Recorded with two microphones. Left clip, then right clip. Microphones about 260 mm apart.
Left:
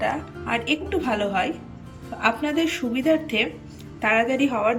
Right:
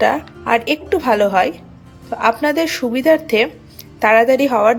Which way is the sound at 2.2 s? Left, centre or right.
Centre.